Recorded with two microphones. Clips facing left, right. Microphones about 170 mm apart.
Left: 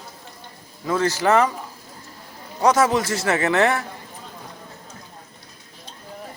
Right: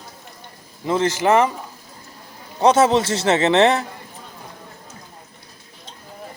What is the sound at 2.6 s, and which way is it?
Speech, 25° right (ahead or behind).